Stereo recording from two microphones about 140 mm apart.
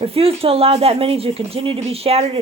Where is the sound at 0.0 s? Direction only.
45° right (ahead or behind).